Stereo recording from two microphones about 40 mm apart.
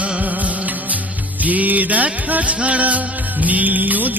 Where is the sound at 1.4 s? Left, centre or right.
Right.